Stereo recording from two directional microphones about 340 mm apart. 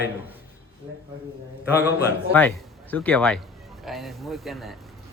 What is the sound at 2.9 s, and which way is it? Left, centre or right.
A man's voice, centre.